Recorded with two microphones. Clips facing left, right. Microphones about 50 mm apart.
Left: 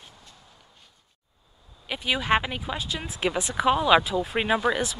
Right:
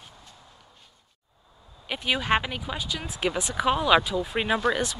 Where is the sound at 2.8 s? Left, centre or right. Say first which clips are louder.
Even; left.